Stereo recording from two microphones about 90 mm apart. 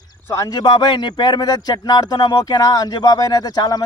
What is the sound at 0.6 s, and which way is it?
Speech, 55° left (ahead or behind).